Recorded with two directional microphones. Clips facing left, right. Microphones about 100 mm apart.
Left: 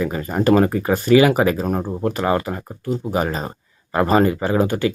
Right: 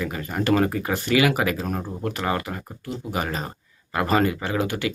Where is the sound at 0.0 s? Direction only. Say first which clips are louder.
Left 7 dB; 35° left (ahead or behind).